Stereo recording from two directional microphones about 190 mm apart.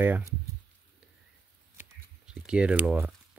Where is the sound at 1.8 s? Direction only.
5° right (ahead or behind).